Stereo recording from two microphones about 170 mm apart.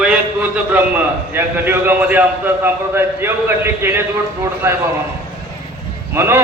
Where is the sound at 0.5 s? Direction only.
10° right (ahead or behind).